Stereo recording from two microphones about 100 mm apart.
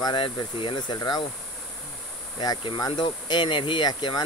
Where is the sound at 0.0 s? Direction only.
50° left (ahead or behind).